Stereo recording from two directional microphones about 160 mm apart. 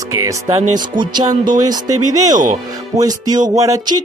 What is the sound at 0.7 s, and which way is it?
Speech, 30° right (ahead or behind).